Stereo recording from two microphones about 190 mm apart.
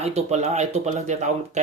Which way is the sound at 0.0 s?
35° right (ahead or behind).